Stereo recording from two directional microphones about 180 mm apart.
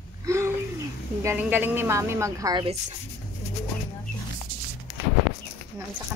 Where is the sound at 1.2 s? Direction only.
10° right (ahead or behind).